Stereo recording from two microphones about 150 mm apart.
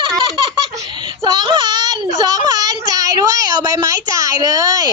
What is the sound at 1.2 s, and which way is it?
Child singing, 30° right (ahead or behind).